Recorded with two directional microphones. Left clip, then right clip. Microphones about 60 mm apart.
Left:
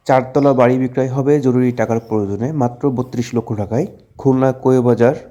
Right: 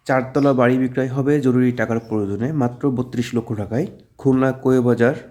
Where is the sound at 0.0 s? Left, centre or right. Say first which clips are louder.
Left 6 dB; left.